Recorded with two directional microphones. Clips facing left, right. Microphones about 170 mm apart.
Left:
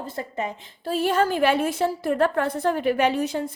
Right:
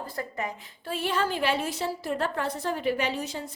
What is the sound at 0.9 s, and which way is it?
A woman's voice, 40° left (ahead or behind).